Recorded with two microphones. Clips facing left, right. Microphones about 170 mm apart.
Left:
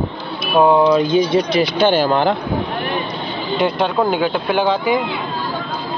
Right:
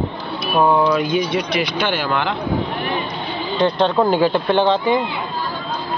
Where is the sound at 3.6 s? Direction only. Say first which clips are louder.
Right 1 dB; 5° left (ahead or behind).